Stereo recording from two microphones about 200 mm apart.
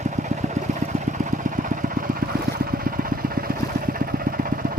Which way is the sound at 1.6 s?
40° right (ahead or behind).